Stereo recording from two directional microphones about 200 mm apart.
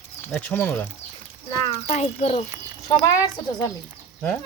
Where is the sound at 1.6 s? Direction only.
30° left (ahead or behind).